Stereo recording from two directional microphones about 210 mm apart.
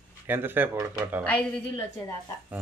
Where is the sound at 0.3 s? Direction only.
10° right (ahead or behind).